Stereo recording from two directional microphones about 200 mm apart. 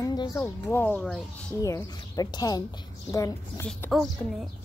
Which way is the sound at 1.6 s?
15° left (ahead or behind).